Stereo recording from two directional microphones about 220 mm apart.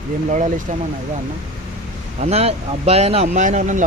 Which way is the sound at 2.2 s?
30° right (ahead or behind).